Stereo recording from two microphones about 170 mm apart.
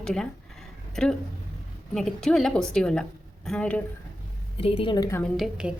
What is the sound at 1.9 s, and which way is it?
Speech, 5° left (ahead or behind).